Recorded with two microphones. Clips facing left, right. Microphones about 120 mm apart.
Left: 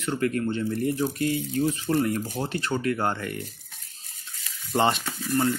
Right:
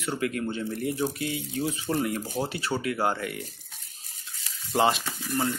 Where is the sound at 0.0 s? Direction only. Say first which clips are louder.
Left 3 dB; 10° right (ahead or behind).